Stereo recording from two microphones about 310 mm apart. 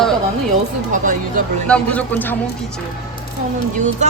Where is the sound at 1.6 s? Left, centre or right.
Centre.